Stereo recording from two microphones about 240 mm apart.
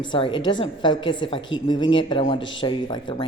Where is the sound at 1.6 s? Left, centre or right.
Centre.